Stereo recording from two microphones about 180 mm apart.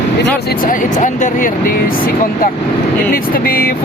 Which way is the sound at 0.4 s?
50° left (ahead or behind).